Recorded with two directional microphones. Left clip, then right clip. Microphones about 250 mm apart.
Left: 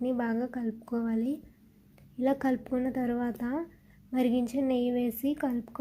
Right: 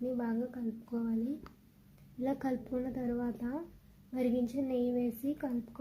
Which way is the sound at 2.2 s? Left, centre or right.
Centre.